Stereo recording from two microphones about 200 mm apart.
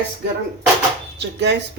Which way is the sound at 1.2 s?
60° right (ahead or behind).